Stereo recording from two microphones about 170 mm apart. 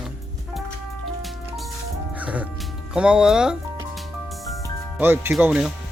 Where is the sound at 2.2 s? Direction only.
10° right (ahead or behind).